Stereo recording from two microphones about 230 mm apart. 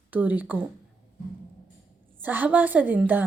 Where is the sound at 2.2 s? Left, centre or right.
Centre.